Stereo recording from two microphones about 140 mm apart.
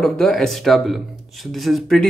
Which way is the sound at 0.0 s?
5° left (ahead or behind).